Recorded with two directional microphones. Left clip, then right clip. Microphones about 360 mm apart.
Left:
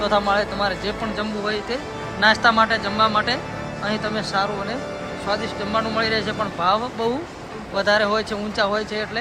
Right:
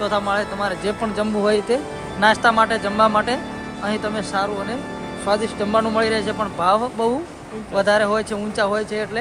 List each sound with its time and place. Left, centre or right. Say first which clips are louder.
0.0 s speech: left 1 dB; centre